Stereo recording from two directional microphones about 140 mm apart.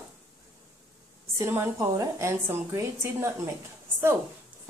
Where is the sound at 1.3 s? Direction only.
15° right (ahead or behind).